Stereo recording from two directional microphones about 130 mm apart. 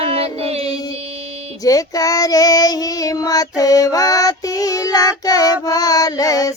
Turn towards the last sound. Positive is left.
turn(degrees=25)  # may be behind; listen again after turning